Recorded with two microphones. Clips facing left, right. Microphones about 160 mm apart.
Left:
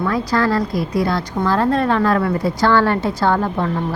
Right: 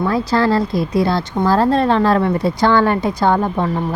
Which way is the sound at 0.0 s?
30° right (ahead or behind).